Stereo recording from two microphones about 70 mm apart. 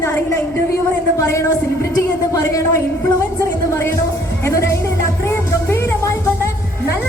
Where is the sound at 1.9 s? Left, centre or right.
Left.